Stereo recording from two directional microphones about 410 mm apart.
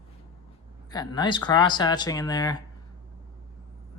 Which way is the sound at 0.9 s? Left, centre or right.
Centre.